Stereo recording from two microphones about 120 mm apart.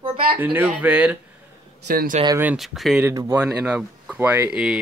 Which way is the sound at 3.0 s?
25° right (ahead or behind).